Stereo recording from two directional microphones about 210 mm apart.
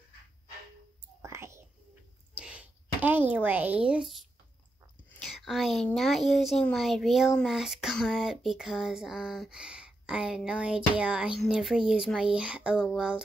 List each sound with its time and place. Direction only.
1.2 s whispering: 15° right (ahead or behind)
2.3 s a sound: 5° right (ahead or behind)
5.2 s a woman's voice: centre (ahead or behind)